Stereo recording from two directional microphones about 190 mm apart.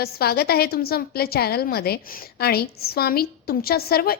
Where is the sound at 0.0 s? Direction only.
55° left (ahead or behind).